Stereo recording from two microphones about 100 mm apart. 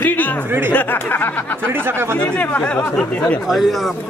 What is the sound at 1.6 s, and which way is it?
Speech, 20° right (ahead or behind).